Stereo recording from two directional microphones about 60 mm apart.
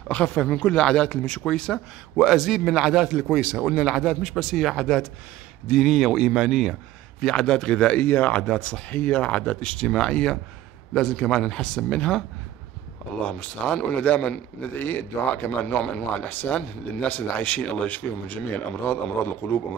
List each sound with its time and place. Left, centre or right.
0.1 s speech: left
2.1 s a man's voice: centre
7.2 s speech: centre
8.0 s speech: left
8.4 s speech: centre
13.2 s speech: left
14.8 s speech: left
15.8 s speech: centre
16.3 s speech: left